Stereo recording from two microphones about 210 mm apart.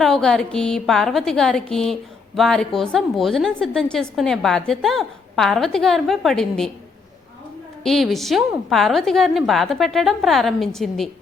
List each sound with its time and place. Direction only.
0.0 s a woman's voice: centre (ahead or behind)
7.9 s a woman's voice: centre (ahead or behind)